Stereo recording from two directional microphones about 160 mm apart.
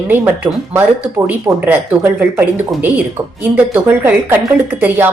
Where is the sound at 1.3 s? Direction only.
10° right (ahead or behind).